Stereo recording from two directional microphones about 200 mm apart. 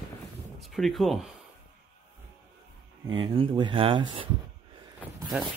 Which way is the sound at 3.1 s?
25° right (ahead or behind).